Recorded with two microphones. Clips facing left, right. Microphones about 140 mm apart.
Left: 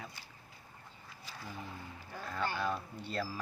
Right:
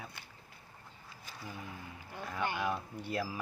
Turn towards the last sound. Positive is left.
turn(degrees=-15)  # may be behind; listen again after turning